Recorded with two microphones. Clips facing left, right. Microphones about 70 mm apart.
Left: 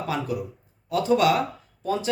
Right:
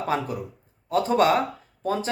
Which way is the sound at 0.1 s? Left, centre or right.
Right.